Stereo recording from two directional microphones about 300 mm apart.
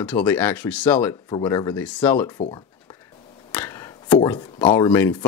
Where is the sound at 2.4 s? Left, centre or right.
Centre.